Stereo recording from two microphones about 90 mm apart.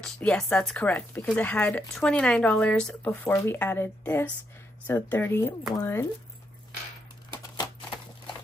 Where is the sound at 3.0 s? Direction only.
20° left (ahead or behind).